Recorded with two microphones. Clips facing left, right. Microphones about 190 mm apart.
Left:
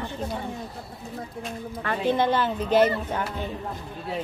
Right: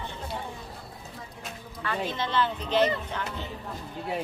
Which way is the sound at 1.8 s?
55° left (ahead or behind).